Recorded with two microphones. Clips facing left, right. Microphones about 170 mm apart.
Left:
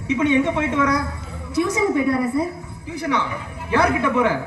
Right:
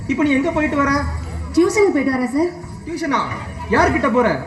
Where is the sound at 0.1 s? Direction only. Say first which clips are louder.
Right 2 dB; 40° right (ahead or behind).